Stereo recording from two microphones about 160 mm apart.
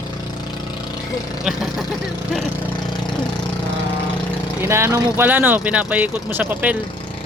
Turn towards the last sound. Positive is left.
turn(degrees=-10)  # may be behind; listen again after turning